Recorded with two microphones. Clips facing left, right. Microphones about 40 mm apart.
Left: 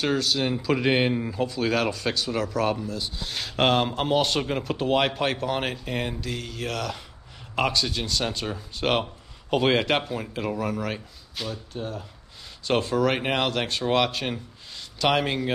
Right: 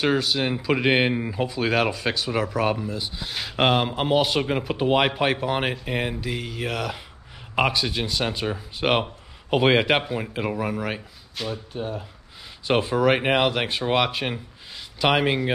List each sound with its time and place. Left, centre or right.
0.0 s speech: centre